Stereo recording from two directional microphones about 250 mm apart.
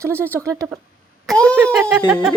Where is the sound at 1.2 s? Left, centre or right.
Centre.